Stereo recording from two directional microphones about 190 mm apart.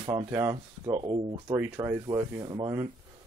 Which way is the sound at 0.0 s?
25° right (ahead or behind).